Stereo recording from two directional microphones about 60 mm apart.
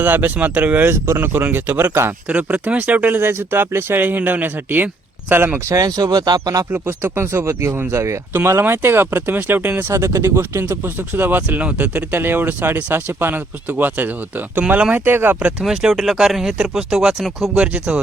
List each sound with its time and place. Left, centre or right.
0.0 s speech: right
1.0 s speech: right
2.2 s speech: right
5.6 s speech: right
6.7 s speech: right
7.0 s speech: right
9.9 s speech: right
15.0 s speech: right
15.6 s speech: centre
17.6 s speech: centre